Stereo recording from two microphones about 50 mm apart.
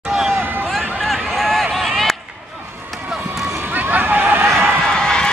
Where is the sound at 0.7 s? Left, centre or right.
Centre.